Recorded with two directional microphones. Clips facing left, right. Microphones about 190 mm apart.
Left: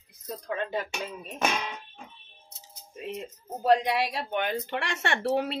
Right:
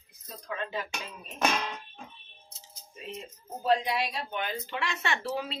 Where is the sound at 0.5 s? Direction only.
50° left (ahead or behind).